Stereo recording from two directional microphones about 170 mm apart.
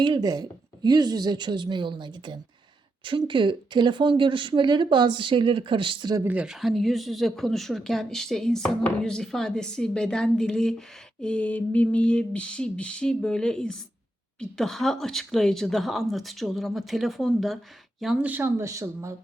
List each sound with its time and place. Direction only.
0.0 s speech: 25° right (ahead or behind)
6.2 s speech: 5° right (ahead or behind)